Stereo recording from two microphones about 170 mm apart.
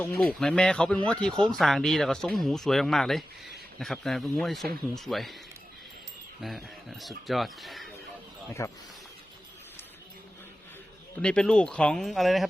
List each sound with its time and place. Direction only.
0.2 s speech: 5° left (ahead or behind)
6.4 s speech: centre (ahead or behind)
8.6 s speech: 15° left (ahead or behind)
11.2 s speech: 5° left (ahead or behind)